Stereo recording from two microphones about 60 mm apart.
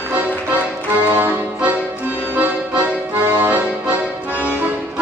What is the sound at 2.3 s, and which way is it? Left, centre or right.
Accordion, right.